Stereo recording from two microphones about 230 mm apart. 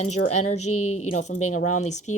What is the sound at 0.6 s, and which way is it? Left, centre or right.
Speech, left.